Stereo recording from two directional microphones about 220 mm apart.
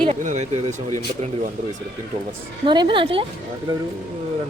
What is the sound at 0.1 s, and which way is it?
Speech, 30° right (ahead or behind).